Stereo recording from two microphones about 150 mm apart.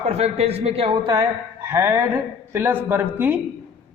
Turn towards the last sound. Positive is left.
turn(degrees=-15)  # may be behind; listen again after turning